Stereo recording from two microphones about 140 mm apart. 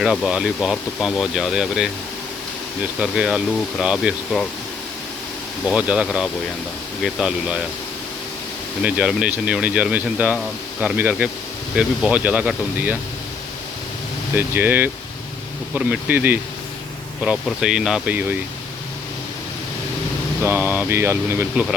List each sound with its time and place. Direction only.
0.0 s speech: 5° right (ahead or behind)
3.0 s speech: 5° right (ahead or behind)
5.6 s speech: 5° right (ahead or behind)
8.8 s speech: 10° right (ahead or behind)
14.3 s speech: 15° right (ahead or behind)
20.4 s speech: 15° right (ahead or behind)
21.5 s speech: 5° right (ahead or behind)